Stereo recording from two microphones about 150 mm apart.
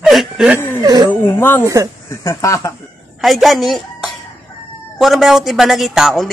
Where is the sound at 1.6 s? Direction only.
20° right (ahead or behind).